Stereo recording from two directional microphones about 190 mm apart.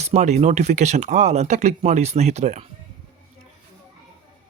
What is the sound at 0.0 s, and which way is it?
Speech, 35° right (ahead or behind).